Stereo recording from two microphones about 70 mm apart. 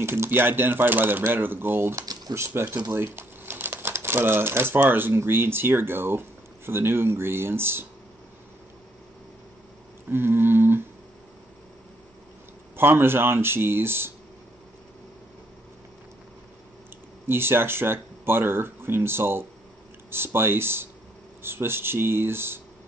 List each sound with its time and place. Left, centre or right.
0.0 s speech: right
2.0 s a sound: right
2.3 s speech: right
10.0 s speech: right
12.7 s speech: right
17.3 s speech: right